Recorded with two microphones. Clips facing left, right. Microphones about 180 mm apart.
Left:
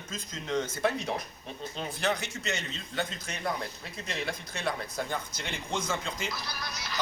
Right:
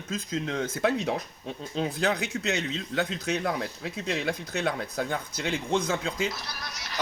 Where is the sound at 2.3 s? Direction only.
75° right (ahead or behind); by 6.0 s 60° right (ahead or behind).